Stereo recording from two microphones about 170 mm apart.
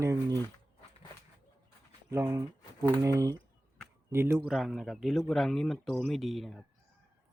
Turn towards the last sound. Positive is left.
turn(degrees=0)  # may be behind; listen again after turning